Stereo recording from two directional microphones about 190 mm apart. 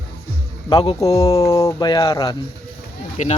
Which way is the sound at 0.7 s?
25° left (ahead or behind).